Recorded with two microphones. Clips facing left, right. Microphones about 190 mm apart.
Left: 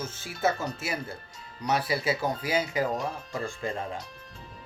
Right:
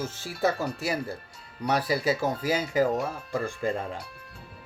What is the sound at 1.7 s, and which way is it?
Speech, 40° right (ahead or behind).